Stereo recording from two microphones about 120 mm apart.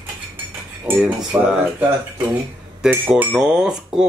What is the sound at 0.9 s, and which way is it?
Cutlery, 15° right (ahead or behind).